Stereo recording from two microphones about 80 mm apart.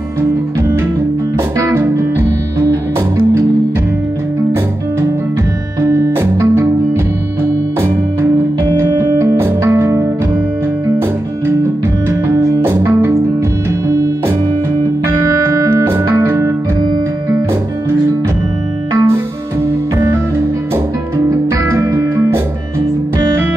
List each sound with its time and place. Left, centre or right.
1.7 s music: right
5.8 s music: right
8.7 s music: right
12.1 s music: right
15.8 s music: right
18.9 s music: right